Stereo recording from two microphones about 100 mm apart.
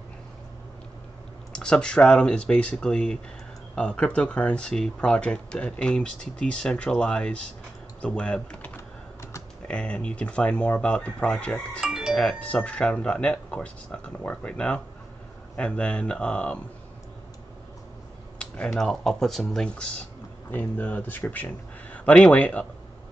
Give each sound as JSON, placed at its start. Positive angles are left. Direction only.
{"t": 1.5, "sound": "speech", "side_deg": 10}
{"t": 11.8, "sound": "doorbell", "side_deg": -5}
{"t": 12.2, "sound": "speech", "side_deg": 10}
{"t": 18.4, "sound": "speech", "side_deg": 10}